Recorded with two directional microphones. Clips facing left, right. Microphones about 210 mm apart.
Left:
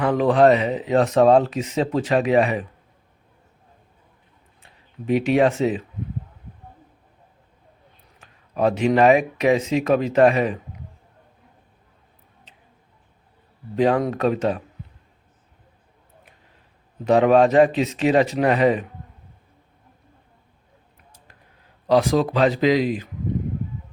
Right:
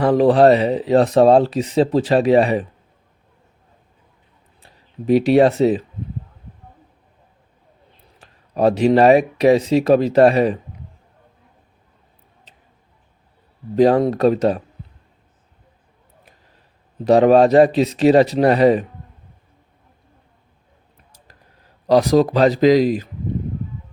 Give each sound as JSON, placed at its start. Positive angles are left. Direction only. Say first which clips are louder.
{"t": 0.0, "sound": "speech", "louder": "right 4 dB", "side_deg": -35}
{"t": 4.6, "sound": "speech", "louder": "right 6 dB", "side_deg": -35}
{"t": 8.2, "sound": "speech", "louder": "right 4 dB", "side_deg": -35}
{"t": 13.7, "sound": "speech", "louder": "right 5 dB", "side_deg": -35}
{"t": 17.0, "sound": "speech", "louder": "right 4 dB", "side_deg": -35}
{"t": 21.8, "sound": "speech", "louder": "right 4 dB", "side_deg": -40}